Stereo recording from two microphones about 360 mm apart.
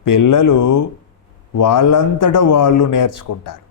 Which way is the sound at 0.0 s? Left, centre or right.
Left.